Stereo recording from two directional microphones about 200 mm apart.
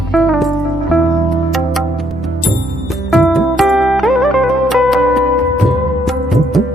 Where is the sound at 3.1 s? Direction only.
Centre (ahead or behind).